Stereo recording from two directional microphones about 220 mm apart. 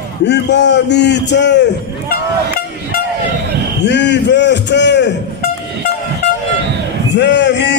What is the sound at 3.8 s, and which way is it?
Speech, 50° left (ahead or behind).